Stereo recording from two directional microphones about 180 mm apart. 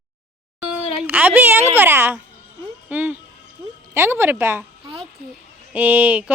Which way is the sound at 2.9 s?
10° right (ahead or behind).